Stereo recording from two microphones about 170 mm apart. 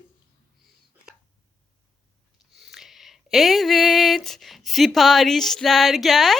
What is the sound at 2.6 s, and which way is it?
Speech, centre (ahead or behind).